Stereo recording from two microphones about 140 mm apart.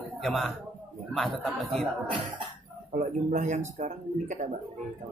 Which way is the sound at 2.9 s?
65° right (ahead or behind).